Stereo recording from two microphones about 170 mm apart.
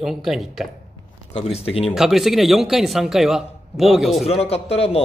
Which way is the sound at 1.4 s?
35° left (ahead or behind).